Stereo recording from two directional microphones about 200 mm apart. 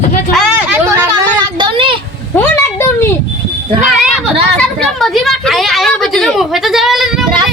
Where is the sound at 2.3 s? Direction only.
10° left (ahead or behind).